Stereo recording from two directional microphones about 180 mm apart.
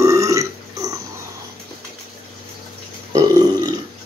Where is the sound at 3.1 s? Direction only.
20° right (ahead or behind).